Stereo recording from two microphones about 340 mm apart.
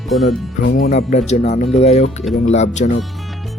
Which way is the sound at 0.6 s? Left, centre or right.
Left.